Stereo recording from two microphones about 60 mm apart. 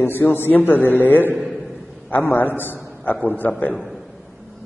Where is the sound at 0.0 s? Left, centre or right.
Left.